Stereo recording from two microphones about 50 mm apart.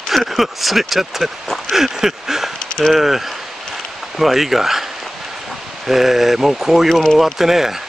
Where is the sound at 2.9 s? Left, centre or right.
Centre.